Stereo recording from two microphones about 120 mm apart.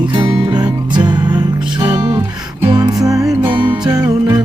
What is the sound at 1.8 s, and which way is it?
Music, 20° right (ahead or behind).